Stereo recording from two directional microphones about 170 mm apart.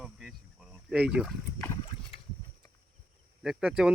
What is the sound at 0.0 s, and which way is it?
Boat, centre (ahead or behind).